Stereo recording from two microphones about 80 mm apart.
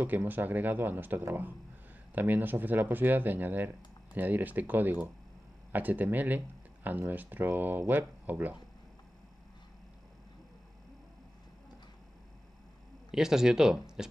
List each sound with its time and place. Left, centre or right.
0.0 s speech: right
13.1 s speech: centre